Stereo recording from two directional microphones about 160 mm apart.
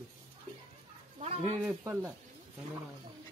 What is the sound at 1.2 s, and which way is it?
Speech, 40° right (ahead or behind).